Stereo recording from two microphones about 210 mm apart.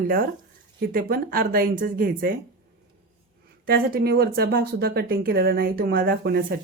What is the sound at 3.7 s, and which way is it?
Speech, 45° right (ahead or behind).